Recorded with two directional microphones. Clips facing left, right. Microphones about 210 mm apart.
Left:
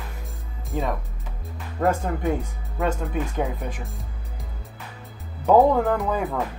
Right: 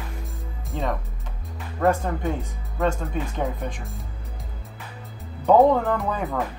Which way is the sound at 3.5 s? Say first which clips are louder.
Even; 5° left (ahead or behind).